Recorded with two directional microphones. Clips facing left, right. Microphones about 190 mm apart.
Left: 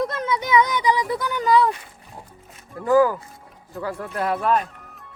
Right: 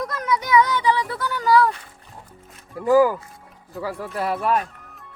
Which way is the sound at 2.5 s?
Centre (ahead or behind).